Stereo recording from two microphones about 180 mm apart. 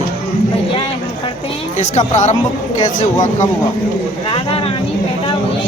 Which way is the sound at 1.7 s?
40° left (ahead or behind).